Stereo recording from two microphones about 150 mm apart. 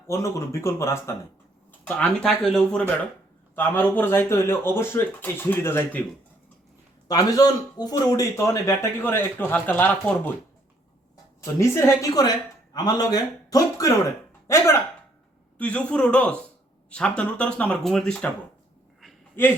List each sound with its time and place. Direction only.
0.1 s speech: 20° left (ahead or behind)
1.8 s speech: 5° left (ahead or behind)
7.1 s speech: 25° left (ahead or behind)
11.6 s speech: 20° left (ahead or behind); by 18.3 s 5° left (ahead or behind)
19.4 s speech: 15° left (ahead or behind)